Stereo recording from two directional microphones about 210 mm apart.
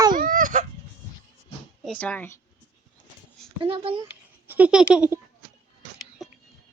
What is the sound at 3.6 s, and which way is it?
Speech, 25° right (ahead or behind).